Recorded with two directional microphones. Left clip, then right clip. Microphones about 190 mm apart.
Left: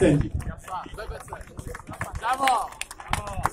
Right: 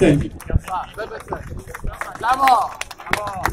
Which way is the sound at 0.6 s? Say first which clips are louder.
Right 8 dB; 25° right (ahead or behind).